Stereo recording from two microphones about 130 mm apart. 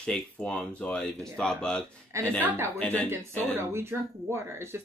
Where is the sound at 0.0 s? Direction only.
10° left (ahead or behind).